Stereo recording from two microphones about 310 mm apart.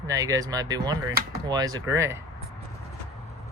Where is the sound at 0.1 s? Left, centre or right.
Centre.